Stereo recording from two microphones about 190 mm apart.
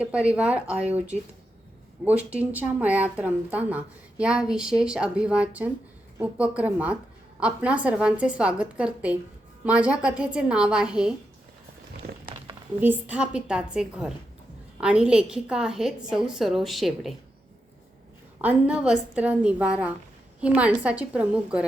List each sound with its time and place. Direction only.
0.0 s a woman's voice: 5° right (ahead or behind)
2.0 s a woman's voice: 5° right (ahead or behind)
12.0 s a sound: 55° right (ahead or behind)
12.8 s a woman's voice: 10° right (ahead or behind)
18.4 s a woman's voice: 5° right (ahead or behind)